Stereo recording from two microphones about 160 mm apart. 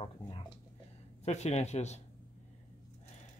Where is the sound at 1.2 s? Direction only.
45° left (ahead or behind).